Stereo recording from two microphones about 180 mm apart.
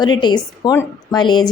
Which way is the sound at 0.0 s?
25° left (ahead or behind).